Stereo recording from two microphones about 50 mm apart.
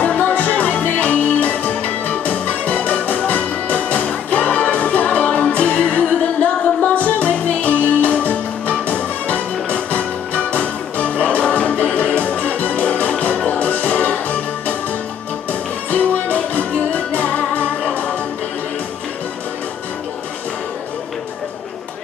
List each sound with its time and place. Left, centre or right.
0.0 s music: left
15.9 s music: left